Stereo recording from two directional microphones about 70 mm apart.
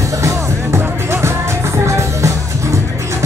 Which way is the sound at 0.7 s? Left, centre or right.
Right.